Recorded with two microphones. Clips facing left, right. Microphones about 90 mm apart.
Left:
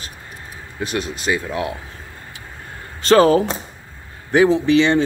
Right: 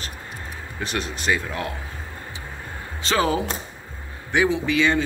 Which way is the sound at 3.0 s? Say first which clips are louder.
Left 9 dB; 45° left (ahead or behind).